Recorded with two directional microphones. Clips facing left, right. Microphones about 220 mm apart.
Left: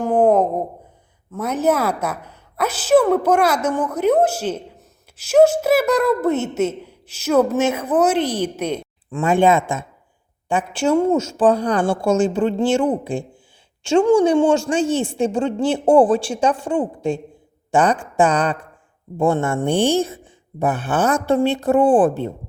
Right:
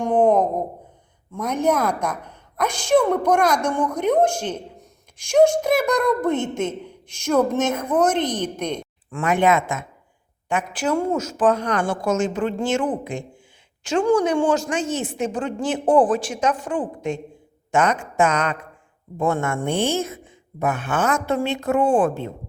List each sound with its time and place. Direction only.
0.0 s a sound: 5° left (ahead or behind)
1.3 s speech: 5° left (ahead or behind)
9.0 s a woman's voice: 25° left (ahead or behind)